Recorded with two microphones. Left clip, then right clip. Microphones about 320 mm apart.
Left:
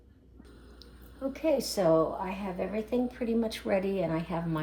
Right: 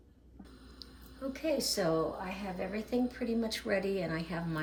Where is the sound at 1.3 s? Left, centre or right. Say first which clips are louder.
Left 4 dB; centre.